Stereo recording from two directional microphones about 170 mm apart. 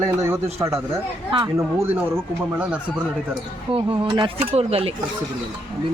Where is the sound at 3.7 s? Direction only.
30° right (ahead or behind).